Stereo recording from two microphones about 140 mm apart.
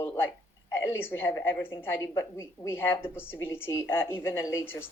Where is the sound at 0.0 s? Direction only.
15° left (ahead or behind).